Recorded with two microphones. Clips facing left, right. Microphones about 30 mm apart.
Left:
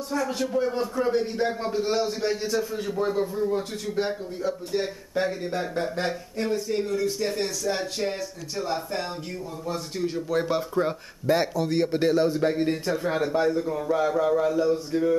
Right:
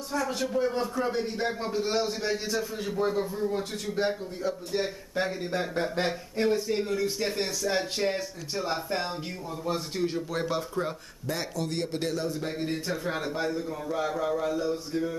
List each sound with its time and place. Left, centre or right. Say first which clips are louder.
0.1 s a man's voice: left 2 dB; centre
6.4 s speech: right 2 dB; right
6.7 s a man's voice: left 2 dB; centre
10.4 s a man's voice: left 4 dB; centre